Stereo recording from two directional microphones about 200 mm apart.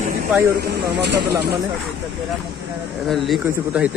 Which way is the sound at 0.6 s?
55° right (ahead or behind).